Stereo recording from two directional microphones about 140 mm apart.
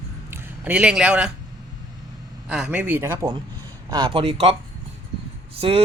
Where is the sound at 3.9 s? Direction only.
35° right (ahead or behind).